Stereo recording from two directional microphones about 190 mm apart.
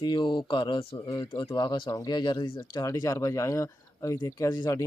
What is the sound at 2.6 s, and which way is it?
Speech, 15° left (ahead or behind).